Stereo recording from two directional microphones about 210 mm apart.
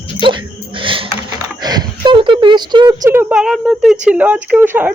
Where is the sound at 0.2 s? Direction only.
25° right (ahead or behind); by 3.9 s 5° right (ahead or behind).